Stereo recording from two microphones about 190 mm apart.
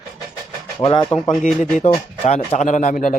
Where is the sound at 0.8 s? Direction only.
25° left (ahead or behind).